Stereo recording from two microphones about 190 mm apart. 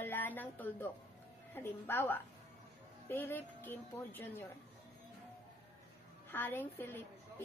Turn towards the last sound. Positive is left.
turn(degrees=10)  # may be behind; listen again after turning